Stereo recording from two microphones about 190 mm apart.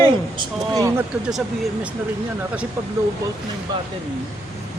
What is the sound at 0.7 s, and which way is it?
Speech, 15° right (ahead or behind).